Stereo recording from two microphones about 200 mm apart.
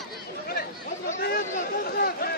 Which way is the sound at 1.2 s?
50° left (ahead or behind).